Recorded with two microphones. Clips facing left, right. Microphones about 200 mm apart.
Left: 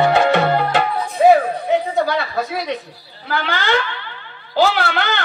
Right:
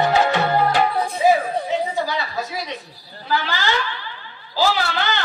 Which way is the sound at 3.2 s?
55° left (ahead or behind).